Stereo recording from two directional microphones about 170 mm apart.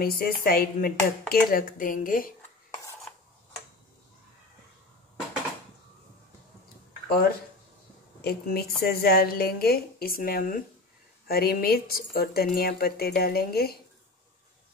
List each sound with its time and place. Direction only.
0.0 s speech: 60° left (ahead or behind)
7.1 s speech: 65° left (ahead or behind)